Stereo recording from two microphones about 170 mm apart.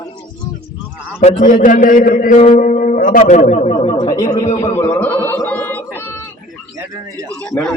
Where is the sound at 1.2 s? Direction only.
45° left (ahead or behind).